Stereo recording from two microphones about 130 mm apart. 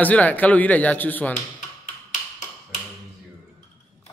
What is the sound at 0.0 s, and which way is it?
Speech, 10° left (ahead or behind).